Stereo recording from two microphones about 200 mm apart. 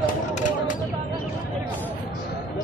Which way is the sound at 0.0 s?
40° left (ahead or behind).